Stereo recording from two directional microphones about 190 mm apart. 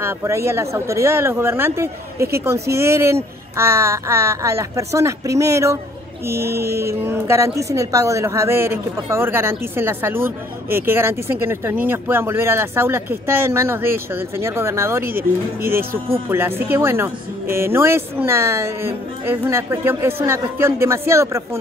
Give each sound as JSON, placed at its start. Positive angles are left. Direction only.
{"t": 0.0, "sound": "a woman's voice", "side_deg": -15}
{"t": 6.4, "sound": "mantra", "side_deg": -55}
{"t": 6.9, "sound": "a woman's voice", "side_deg": -15}
{"t": 16.3, "sound": "a woman's voice", "side_deg": -10}